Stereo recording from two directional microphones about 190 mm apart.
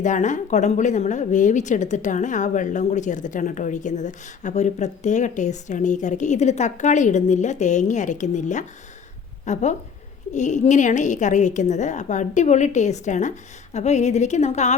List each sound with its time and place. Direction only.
0.0 s speech: 40° left (ahead or behind)